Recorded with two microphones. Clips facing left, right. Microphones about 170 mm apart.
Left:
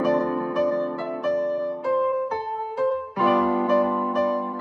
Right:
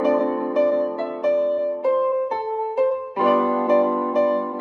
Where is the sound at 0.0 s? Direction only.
20° right (ahead or behind).